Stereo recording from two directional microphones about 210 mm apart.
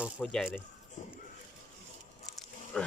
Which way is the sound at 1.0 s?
35° left (ahead or behind).